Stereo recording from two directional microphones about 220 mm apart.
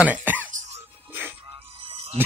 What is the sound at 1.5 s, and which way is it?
Music, 25° right (ahead or behind).